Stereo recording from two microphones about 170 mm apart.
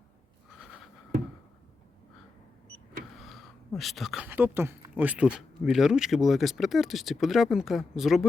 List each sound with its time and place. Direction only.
3.2 s speech: centre (ahead or behind)